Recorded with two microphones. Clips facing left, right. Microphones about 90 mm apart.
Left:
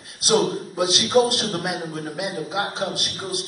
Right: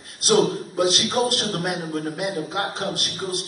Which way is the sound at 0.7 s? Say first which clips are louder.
Left 3 dB; centre (ahead or behind).